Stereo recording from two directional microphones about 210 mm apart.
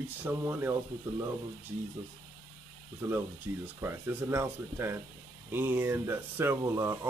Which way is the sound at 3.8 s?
10° right (ahead or behind).